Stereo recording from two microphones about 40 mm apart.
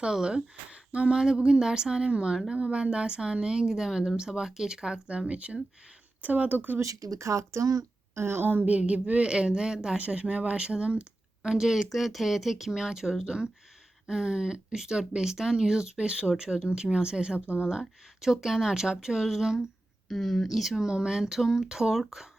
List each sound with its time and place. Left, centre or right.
0.0 s speech: centre
5.3 s speech: right
6.2 s speech: right
8.1 s a woman's voice: right
8.6 s speech: right
9.3 s speech: centre
10.0 s speech: right
11.4 s speech: centre
17.7 s speech: centre
20.1 s speech: centre
20.8 s speech: centre